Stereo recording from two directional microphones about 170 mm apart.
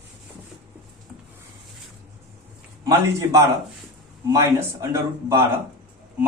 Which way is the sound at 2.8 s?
20° right (ahead or behind).